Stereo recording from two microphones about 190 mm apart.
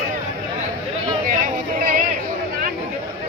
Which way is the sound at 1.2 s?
45° right (ahead or behind).